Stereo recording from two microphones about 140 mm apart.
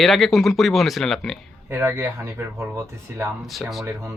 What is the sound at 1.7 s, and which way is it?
Speech, 15° right (ahead or behind).